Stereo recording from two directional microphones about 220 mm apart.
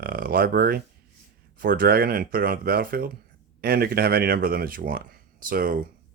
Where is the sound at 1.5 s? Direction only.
40° right (ahead or behind).